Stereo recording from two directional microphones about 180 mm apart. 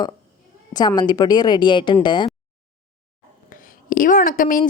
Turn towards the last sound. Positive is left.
turn(degrees=50)  # may be behind; listen again after turning